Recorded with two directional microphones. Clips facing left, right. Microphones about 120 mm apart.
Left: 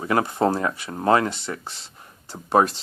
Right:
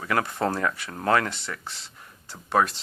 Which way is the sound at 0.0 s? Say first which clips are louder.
Left 5 dB; 25° left (ahead or behind).